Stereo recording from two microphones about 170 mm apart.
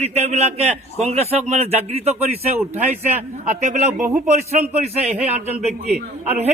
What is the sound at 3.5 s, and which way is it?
A man's voice, 45° right (ahead or behind).